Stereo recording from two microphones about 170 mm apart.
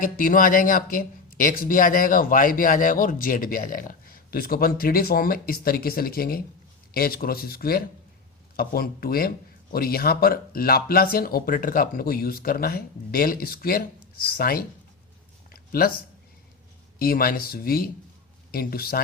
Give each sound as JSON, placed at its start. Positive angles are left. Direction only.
{"t": 0.0, "sound": "speech", "side_deg": 55}
{"t": 15.4, "sound": "a sound", "side_deg": 60}
{"t": 17.0, "sound": "speech", "side_deg": 60}